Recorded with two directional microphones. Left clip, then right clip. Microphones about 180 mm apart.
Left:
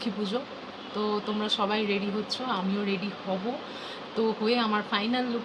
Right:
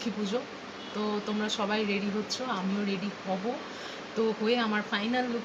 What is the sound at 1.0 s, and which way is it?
Speech, 10° left (ahead or behind).